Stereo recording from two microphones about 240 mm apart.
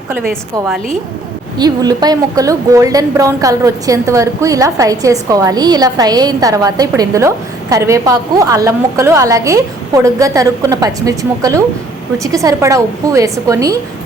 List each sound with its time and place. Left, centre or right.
1.5 s a woman's voice: centre